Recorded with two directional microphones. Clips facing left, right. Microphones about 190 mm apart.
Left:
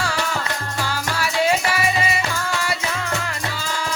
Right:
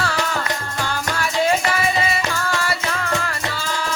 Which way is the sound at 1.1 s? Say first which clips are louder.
Right 1 dB; 5° left (ahead or behind).